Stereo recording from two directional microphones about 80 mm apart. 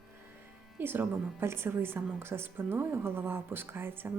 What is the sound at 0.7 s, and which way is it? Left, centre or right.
A woman's voice, right.